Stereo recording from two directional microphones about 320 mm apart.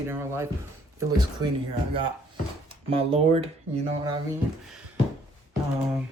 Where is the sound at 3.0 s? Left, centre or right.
Centre.